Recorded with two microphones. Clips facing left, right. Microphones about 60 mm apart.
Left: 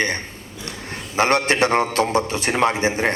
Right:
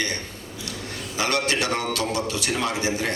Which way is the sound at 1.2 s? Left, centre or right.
Left.